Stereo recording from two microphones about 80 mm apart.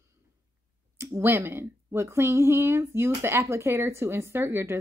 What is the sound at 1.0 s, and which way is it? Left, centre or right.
Speech, right.